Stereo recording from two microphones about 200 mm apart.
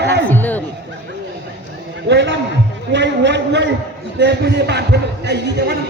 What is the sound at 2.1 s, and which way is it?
A man's voice, 60° right (ahead or behind).